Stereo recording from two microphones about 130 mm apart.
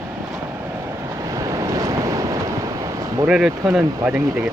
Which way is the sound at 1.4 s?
25° right (ahead or behind).